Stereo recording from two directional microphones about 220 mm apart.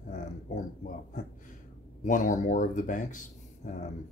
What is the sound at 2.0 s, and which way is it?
Speech, 35° left (ahead or behind).